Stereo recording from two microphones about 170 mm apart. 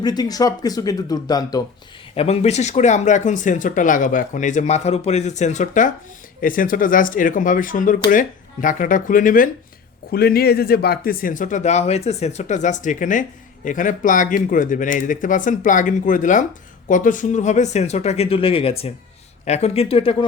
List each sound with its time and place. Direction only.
0.0 s speech: 25° left (ahead or behind)
2.1 s speech: 40° left (ahead or behind)
10.1 s speech: 65° left (ahead or behind); by 20.1 s 35° left (ahead or behind)